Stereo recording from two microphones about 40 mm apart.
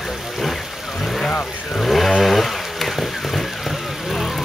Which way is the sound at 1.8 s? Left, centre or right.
Centre.